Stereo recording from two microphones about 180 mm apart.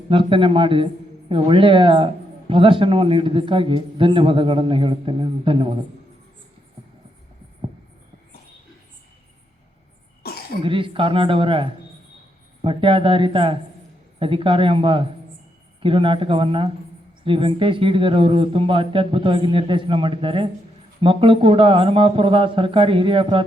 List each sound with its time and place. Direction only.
0.1 s speech: 30° right (ahead or behind)
10.2 s cough: 60° left (ahead or behind)
10.6 s speech: 30° right (ahead or behind)